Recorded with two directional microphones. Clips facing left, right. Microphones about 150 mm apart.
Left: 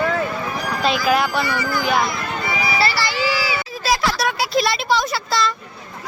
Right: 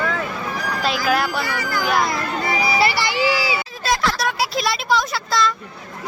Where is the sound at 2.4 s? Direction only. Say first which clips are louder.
Right 2 dB; 35° right (ahead or behind).